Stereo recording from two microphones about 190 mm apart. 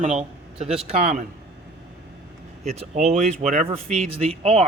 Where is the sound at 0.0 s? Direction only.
35° right (ahead or behind).